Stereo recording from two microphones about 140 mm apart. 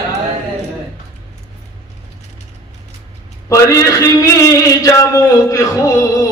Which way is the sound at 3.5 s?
25° left (ahead or behind).